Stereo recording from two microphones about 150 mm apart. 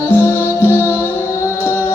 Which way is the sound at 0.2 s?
15° left (ahead or behind).